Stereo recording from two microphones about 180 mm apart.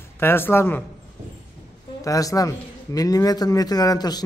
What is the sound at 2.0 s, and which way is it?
A man's voice, 20° left (ahead or behind).